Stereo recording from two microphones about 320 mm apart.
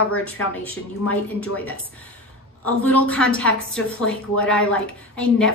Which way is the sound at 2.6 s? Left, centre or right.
Centre.